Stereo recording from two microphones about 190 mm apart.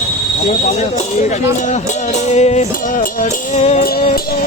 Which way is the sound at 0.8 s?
40° left (ahead or behind).